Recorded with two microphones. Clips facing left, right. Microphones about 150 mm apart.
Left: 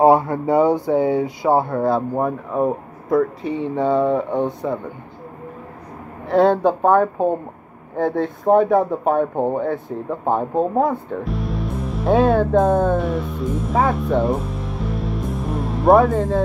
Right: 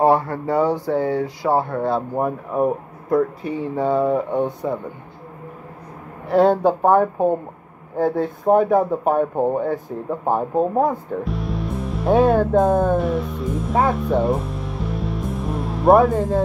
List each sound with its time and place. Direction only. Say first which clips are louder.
0.0 s speech: left 3 dB; 15° left (ahead or behind); by 2.2 s centre (ahead or behind)
2.2 s speech: even; 10° right (ahead or behind)
3.7 s speech: left 1 dB; 5° right (ahead or behind)
6.2 s speech: even; 5° right (ahead or behind)
11.2 s music: left 1 dB; centre (ahead or behind)